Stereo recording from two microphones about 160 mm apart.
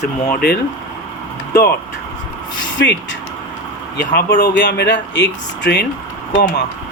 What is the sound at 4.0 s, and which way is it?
Speech, 90° left.